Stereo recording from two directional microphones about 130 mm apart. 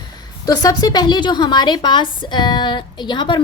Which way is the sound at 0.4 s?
30° left (ahead or behind).